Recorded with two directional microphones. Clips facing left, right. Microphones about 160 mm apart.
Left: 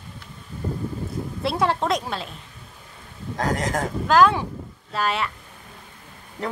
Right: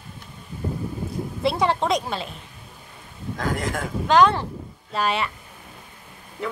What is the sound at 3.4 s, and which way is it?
Speech, 40° left (ahead or behind).